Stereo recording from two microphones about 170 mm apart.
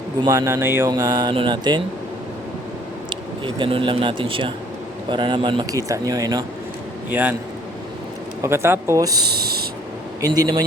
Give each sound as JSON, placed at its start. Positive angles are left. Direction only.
{"t": 0.3, "sound": "speech", "side_deg": -15}
{"t": 3.1, "sound": "speech", "side_deg": -30}
{"t": 7.1, "sound": "speech", "side_deg": -10}
{"t": 8.4, "sound": "speech", "side_deg": -15}
{"t": 9.3, "sound": "speech", "side_deg": -65}
{"t": 10.2, "sound": "speech", "side_deg": -20}